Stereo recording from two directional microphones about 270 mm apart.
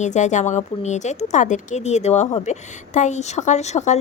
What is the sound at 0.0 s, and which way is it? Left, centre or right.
Speech, left.